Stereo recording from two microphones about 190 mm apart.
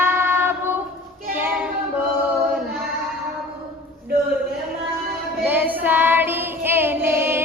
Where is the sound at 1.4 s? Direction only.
10° right (ahead or behind).